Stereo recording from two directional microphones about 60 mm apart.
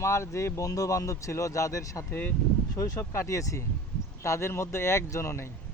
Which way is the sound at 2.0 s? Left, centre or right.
Left.